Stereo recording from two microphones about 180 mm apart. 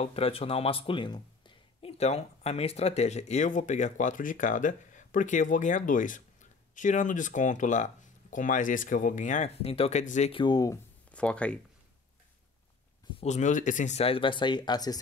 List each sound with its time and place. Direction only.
0.0 s speech: 35° left (ahead or behind)
10.3 s speech: 25° left (ahead or behind)
11.1 s speech: 5° left (ahead or behind)
13.2 s speech: 40° left (ahead or behind); by 15.0 s 20° left (ahead or behind)